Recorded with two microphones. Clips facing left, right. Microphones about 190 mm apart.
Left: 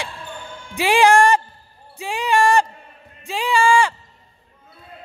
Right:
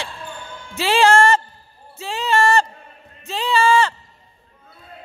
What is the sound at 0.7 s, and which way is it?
Speech, 15° left (ahead or behind).